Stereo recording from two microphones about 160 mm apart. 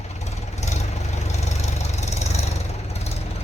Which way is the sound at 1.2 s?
45° left (ahead or behind).